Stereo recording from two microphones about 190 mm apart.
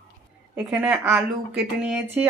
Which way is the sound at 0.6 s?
5° right (ahead or behind).